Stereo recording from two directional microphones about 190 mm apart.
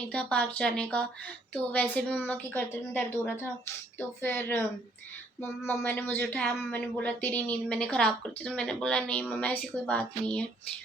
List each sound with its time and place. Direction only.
0.1 s speech: 5° left (ahead or behind)